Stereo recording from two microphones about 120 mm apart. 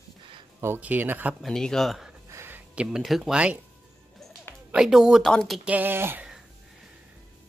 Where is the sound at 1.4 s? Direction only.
5° left (ahead or behind).